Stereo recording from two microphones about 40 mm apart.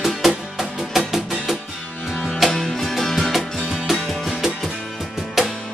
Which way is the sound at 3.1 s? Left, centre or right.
Centre.